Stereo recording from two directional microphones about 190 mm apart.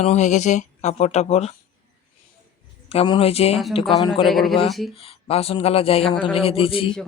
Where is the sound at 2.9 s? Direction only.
30° left (ahead or behind).